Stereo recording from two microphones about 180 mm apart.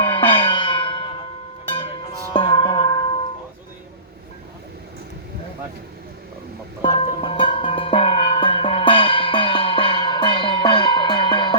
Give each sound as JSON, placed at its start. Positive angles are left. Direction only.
{"t": 0.0, "sound": "music", "side_deg": 30}
{"t": 2.3, "sound": "music", "side_deg": 25}
{"t": 6.8, "sound": "music", "side_deg": 30}